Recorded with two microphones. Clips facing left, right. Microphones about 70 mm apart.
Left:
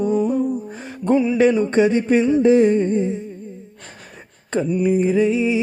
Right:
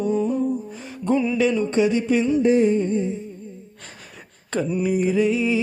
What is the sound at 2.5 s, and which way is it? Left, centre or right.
Humming, left.